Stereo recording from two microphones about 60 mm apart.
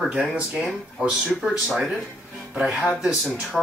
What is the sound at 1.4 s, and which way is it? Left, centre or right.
Speech, centre.